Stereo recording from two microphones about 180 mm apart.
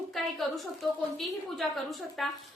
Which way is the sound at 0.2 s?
Centre (ahead or behind).